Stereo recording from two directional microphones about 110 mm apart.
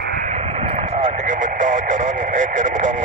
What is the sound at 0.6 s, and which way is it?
Vehicle, 80° right.